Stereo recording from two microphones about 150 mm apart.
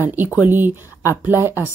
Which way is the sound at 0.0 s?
15° right (ahead or behind).